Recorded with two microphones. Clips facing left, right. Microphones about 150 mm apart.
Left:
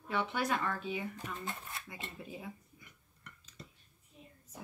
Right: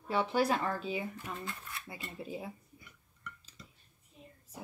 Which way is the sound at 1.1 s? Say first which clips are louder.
Even; 20° left (ahead or behind).